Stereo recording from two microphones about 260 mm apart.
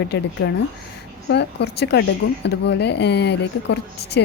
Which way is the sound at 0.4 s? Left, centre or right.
Left.